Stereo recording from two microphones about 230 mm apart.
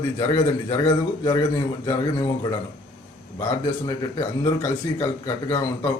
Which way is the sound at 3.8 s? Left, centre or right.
Centre.